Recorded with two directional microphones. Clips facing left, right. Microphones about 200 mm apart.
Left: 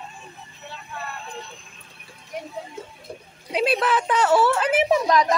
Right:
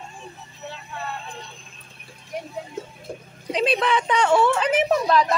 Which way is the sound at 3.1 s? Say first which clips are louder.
Right 4 dB; 45° right (ahead or behind).